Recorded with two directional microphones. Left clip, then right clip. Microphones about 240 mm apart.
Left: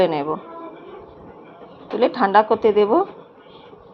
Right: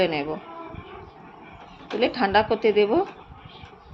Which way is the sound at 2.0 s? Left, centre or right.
Centre.